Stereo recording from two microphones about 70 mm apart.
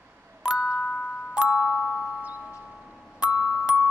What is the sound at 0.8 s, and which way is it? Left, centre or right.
Glockenspiel, centre.